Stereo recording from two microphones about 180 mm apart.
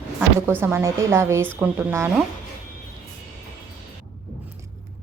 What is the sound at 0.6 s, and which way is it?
A woman's voice, 15° right (ahead or behind).